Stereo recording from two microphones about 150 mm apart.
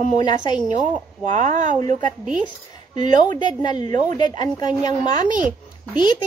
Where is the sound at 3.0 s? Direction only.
55° right (ahead or behind).